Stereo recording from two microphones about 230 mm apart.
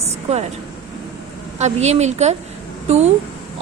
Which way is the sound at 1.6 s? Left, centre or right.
Right.